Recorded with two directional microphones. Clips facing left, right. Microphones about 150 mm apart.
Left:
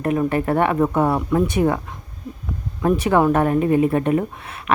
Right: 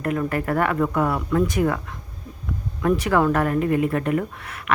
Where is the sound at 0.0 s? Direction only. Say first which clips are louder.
Left 4 dB; 20° left (ahead or behind).